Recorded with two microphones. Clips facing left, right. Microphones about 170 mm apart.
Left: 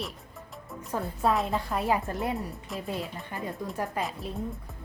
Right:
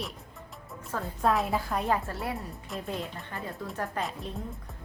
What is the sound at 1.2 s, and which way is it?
Speech, centre (ahead or behind).